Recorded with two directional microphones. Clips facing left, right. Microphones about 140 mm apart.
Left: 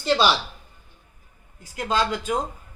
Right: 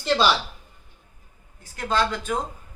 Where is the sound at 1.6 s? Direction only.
15° left (ahead or behind).